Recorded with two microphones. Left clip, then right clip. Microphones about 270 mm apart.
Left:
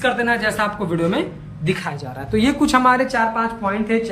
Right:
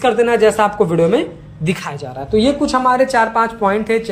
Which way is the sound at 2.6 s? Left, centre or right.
Centre.